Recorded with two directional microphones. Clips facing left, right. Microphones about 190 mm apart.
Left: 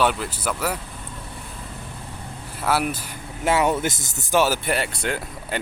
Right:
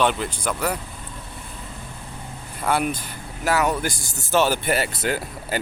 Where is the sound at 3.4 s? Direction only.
25° left (ahead or behind).